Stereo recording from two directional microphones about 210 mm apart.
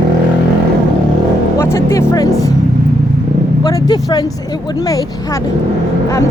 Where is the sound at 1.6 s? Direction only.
15° left (ahead or behind).